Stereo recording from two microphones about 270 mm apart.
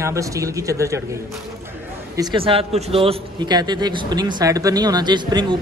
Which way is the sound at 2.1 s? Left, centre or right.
Centre.